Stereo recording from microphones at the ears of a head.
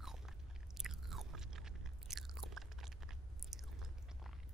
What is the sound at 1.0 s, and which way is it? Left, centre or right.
Chewing, right.